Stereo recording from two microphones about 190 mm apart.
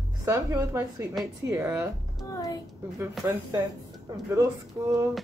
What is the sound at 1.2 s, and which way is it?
Speech, centre (ahead or behind).